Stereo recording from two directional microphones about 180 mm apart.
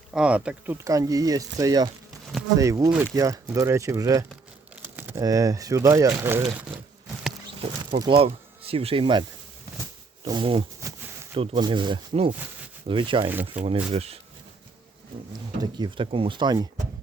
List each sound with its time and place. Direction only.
0.1 s speech: 5° right (ahead or behind)
4.7 s crumpling: 10° right (ahead or behind)
5.2 s speech: 20° right (ahead or behind)
7.6 s speech: 25° right (ahead or behind)
10.2 s speech: 30° right (ahead or behind)
10.8 s a sound: 15° right (ahead or behind)
11.3 s speech: 30° right (ahead or behind)
13.6 s speech: 5° right (ahead or behind)
13.9 s speech: 35° right (ahead or behind)
15.6 s speech: 25° right (ahead or behind)